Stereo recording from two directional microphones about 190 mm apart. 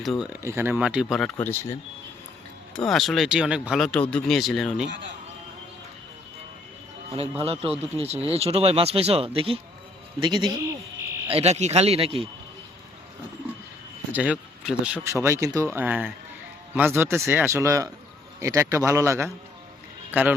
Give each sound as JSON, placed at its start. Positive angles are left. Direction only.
{"t": 0.0, "sound": "speech", "side_deg": 0}
{"t": 0.4, "sound": "speech", "side_deg": -10}
{"t": 1.1, "sound": "speech", "side_deg": 5}
{"t": 2.7, "sound": "speech", "side_deg": 0}
{"t": 7.2, "sound": "a man's voice", "side_deg": -30}
{"t": 14.1, "sound": "a man's voice", "side_deg": -5}